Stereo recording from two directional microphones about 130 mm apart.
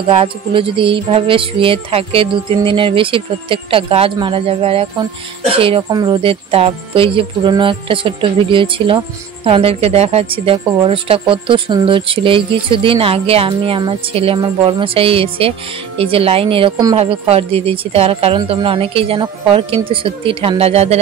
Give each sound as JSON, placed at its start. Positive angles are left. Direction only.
{"t": 0.1, "sound": "speech", "side_deg": -45}
{"t": 5.9, "sound": "speech", "side_deg": -30}